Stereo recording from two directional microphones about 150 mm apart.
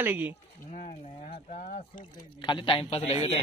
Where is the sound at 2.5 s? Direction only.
35° left (ahead or behind).